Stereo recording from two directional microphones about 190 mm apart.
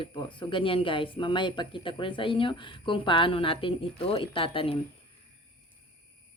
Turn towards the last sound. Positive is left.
turn(degrees=30)  # may be behind; listen again after turning